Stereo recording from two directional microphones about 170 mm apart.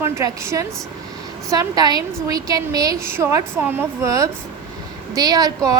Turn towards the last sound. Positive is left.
turn(degrees=-20)  # may be behind; listen again after turning